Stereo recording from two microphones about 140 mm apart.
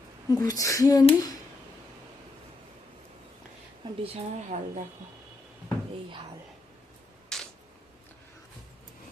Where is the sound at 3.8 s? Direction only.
30° right (ahead or behind).